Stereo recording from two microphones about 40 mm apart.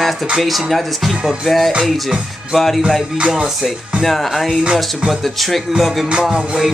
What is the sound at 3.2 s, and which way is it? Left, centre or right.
Music, right.